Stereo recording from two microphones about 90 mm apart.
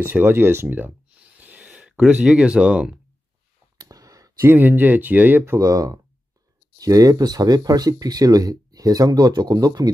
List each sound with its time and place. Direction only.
0.0 s speech: 20° right (ahead or behind)
3.7 s a sound: 45° right (ahead or behind)
4.5 s speech: 20° right (ahead or behind)
5.6 s speech: 40° right (ahead or behind)